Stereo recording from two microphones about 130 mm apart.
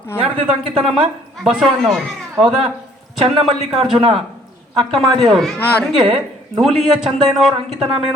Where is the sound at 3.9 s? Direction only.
45° right (ahead or behind).